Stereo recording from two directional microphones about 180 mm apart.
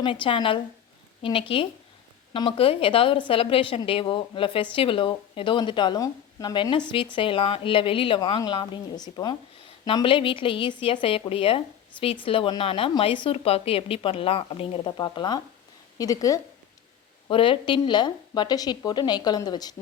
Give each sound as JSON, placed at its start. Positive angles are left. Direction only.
{"t": 0.0, "sound": "a woman's voice", "side_deg": 30}
{"t": 17.2, "sound": "speech", "side_deg": 30}